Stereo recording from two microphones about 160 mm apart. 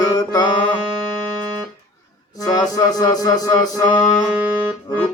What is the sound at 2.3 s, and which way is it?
Music, 20° left (ahead or behind).